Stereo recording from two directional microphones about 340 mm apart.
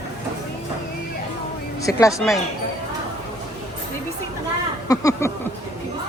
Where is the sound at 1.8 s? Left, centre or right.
Centre.